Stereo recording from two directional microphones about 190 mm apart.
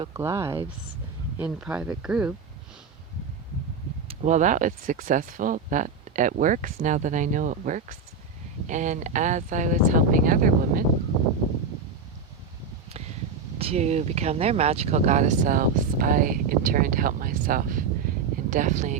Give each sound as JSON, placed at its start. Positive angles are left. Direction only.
{"t": 0.1, "sound": "speech", "side_deg": -15}
{"t": 1.4, "sound": "speech", "side_deg": -5}
{"t": 4.1, "sound": "speech", "side_deg": -35}
{"t": 13.6, "sound": "speech", "side_deg": -35}